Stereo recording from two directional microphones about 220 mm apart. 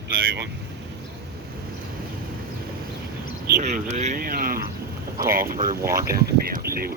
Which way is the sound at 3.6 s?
30° right (ahead or behind).